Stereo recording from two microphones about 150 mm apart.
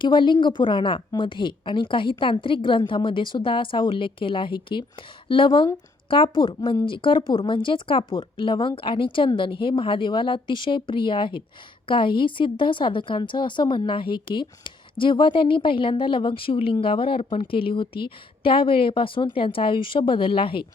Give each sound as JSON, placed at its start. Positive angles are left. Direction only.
{"t": 0.0, "sound": "a woman's voice", "side_deg": 30}